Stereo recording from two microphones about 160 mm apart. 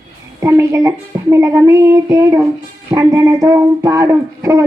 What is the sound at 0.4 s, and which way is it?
A woman's voice, 15° right (ahead or behind).